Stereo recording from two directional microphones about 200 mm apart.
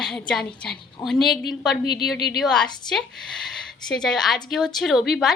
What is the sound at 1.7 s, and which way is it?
Speech, 55° left (ahead or behind).